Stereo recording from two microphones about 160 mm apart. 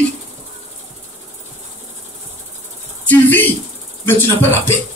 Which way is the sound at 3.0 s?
10° left (ahead or behind).